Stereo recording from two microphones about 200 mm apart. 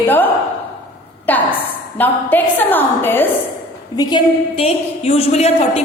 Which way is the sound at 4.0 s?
20° left (ahead or behind).